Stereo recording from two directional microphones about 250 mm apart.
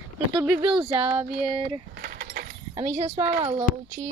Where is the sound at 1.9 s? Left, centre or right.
Right.